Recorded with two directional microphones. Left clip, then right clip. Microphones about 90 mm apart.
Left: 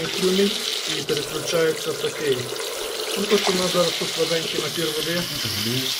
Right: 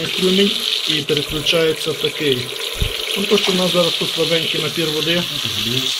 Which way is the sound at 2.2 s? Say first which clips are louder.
Right 5 dB; 10° left (ahead or behind).